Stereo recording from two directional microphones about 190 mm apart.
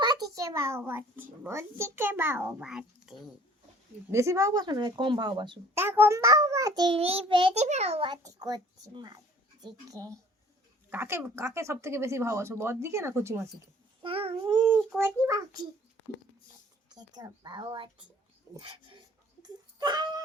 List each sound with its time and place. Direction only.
0.0 s a child's voice: 20° right (ahead or behind); by 3.2 s 5° right (ahead or behind)
4.1 s a child's voice: 15° right (ahead or behind)
5.8 s a child's voice: 10° right (ahead or behind)
14.0 s a child's voice: 30° right (ahead or behind)
16.9 s a child's voice: 20° right (ahead or behind)
19.4 s whimper: 20° right (ahead or behind)